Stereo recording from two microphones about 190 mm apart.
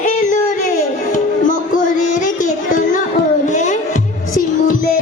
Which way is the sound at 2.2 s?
45° left (ahead or behind).